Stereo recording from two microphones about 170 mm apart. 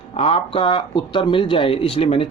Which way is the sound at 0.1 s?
35° left (ahead or behind).